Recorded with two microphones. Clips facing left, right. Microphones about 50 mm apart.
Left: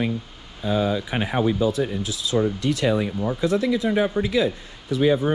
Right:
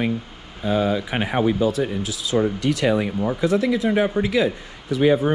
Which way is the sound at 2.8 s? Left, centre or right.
Right.